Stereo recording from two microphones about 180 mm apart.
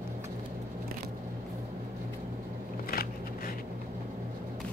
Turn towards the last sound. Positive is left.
turn(degrees=55)  # may be behind; listen again after turning